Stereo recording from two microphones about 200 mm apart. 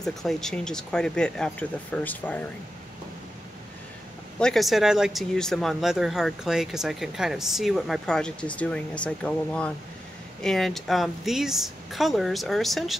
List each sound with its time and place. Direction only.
0.0 s speech: centre (ahead or behind)
4.4 s speech: centre (ahead or behind)